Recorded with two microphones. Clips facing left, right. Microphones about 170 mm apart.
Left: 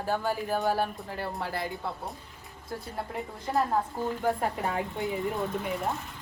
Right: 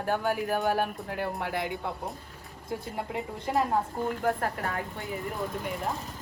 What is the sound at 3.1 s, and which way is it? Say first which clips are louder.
Speech: right 3 dB; 20° right (ahead or behind).